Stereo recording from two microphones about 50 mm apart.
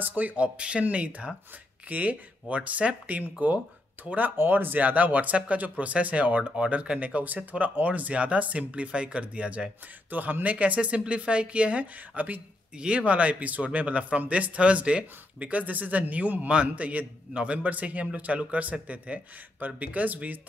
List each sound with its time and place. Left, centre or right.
0.0 s speech: right
0.6 s speech: right
4.4 s speech: right
10.0 s speech: right
12.7 s speech: right